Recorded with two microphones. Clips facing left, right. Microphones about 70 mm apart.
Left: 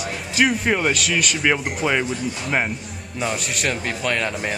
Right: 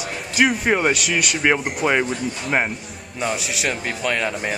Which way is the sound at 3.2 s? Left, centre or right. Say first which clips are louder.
Right 1 dB; centre.